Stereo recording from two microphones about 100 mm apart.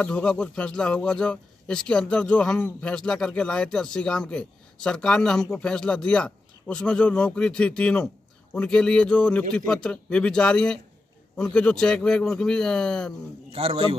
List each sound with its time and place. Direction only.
0.0 s speech: 10° left (ahead or behind)
13.5 s a man's voice: 75° right (ahead or behind)